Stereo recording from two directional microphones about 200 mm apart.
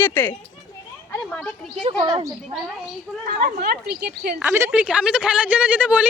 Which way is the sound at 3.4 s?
50° right (ahead or behind).